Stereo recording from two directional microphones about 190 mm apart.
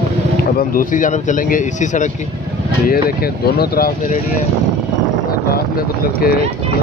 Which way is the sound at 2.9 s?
55° left (ahead or behind).